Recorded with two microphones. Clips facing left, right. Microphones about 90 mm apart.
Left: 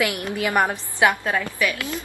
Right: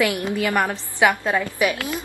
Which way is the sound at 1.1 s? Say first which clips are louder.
Right 2 dB; 20° right (ahead or behind).